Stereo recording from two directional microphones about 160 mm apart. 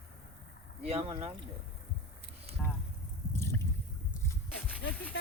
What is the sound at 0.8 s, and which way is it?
Speech, 40° right (ahead or behind).